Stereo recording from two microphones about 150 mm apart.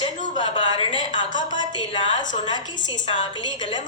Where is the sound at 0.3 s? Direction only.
35° left (ahead or behind).